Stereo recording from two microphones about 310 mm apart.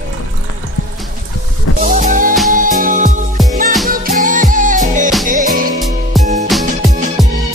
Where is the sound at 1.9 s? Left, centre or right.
Right.